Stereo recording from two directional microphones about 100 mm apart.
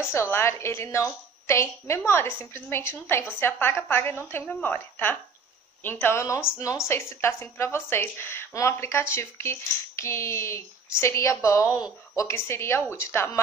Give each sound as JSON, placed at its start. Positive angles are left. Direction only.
{"t": 0.1, "sound": "a woman's voice", "side_deg": 25}